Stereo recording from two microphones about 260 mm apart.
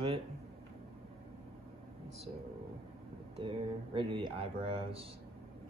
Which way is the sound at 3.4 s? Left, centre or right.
Centre.